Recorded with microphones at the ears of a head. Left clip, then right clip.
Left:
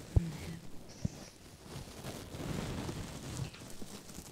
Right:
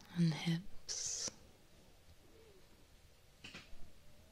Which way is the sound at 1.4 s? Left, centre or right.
Left.